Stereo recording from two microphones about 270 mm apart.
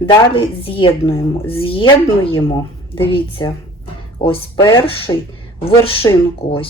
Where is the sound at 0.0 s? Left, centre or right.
Centre.